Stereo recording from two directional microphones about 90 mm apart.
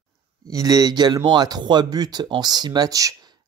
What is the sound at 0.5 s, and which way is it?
Speech, 40° right (ahead or behind).